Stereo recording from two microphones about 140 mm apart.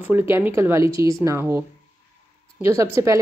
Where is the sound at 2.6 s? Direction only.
20° right (ahead or behind).